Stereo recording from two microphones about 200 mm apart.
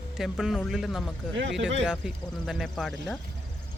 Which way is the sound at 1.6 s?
65° right (ahead or behind).